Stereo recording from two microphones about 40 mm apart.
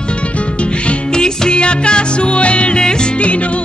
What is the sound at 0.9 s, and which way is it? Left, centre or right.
Music, centre.